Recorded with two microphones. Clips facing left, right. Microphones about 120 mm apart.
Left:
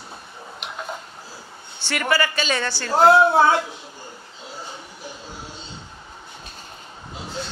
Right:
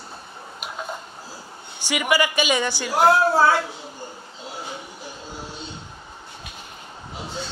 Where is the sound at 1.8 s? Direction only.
10° right (ahead or behind).